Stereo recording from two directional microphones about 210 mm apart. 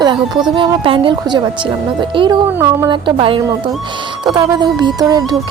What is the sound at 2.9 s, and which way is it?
A woman's voice, 25° right (ahead or behind).